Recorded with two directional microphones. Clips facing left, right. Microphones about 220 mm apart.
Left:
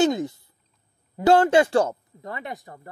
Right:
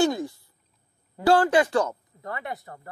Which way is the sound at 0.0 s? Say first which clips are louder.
Left 2 dB; 20° left (ahead or behind).